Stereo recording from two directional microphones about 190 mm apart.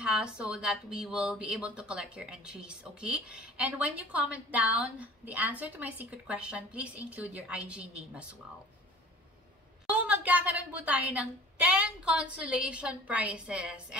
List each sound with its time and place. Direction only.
0.0 s speech: 5° right (ahead or behind)
9.8 s speech: 5° right (ahead or behind)